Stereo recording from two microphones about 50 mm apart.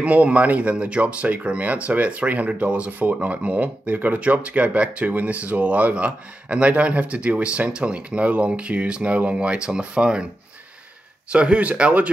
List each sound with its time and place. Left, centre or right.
0.0 s speech: right
11.2 s speech: right